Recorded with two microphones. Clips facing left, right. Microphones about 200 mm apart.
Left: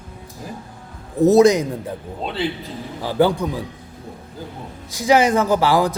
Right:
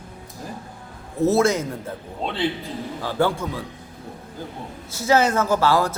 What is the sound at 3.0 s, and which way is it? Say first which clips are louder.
Speech: left 5 dB; 15° left (ahead or behind).